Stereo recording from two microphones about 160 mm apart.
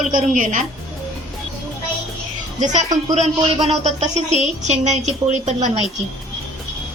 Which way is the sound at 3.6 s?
45° right (ahead or behind).